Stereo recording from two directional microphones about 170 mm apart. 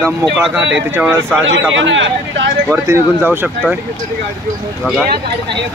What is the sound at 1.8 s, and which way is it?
Speech, 90° right.